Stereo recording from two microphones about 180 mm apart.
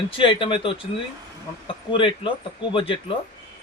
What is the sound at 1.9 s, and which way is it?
Speech, 30° left (ahead or behind).